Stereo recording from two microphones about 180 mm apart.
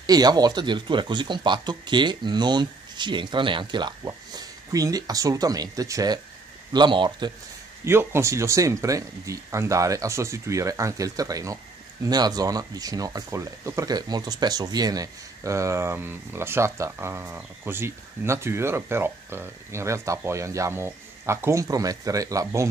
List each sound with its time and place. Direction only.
0.0 s speech: 20° right (ahead or behind)
7.8 s speech: 15° right (ahead or behind)